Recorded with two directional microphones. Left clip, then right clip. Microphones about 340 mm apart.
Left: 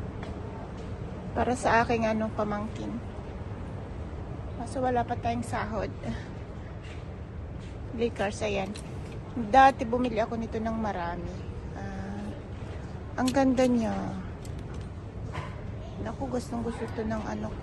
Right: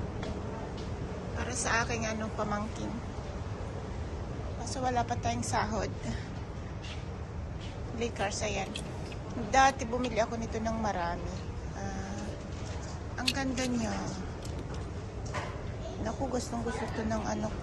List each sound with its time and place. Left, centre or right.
1.4 s a woman's voice: centre
4.7 s a woman's voice: centre
8.0 s a woman's voice: centre
13.1 s a woman's voice: centre
16.0 s a woman's voice: centre